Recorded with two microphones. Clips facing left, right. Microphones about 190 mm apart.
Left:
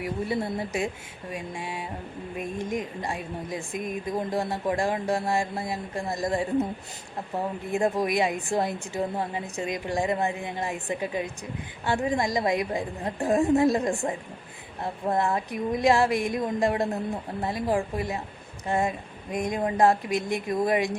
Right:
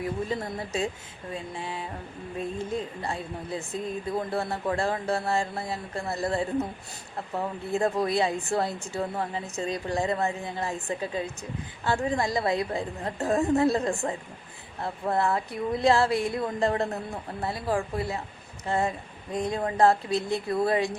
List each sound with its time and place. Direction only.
0.0 s speech: 10° left (ahead or behind)